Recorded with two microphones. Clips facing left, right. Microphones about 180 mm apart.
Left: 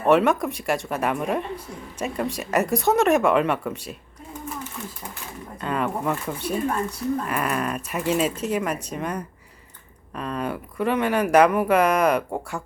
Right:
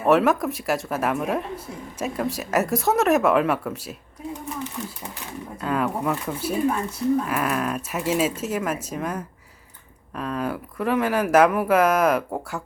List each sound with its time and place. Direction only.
0.0 s speech: centre (ahead or behind)
5.5 s speech: centre (ahead or behind)